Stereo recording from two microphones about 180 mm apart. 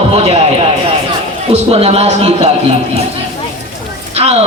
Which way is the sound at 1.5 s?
35° right (ahead or behind).